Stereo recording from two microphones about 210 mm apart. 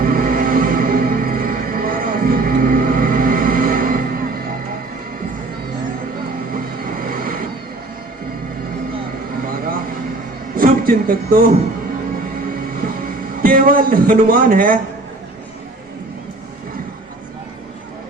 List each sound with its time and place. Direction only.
0.0 s music: 45° right (ahead or behind)
6.5 s vehicle: 45° right (ahead or behind)
9.5 s vehicle: 45° right (ahead or behind)
10.5 s music: 45° right (ahead or behind)
13.1 s a man's voice: 40° right (ahead or behind)